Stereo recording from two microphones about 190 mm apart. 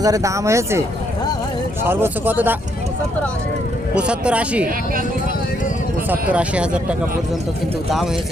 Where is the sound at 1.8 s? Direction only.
10° right (ahead or behind).